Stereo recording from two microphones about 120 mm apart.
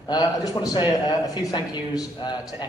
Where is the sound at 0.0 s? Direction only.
30° left (ahead or behind).